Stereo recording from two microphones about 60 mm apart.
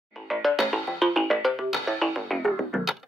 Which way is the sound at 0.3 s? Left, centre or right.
Centre.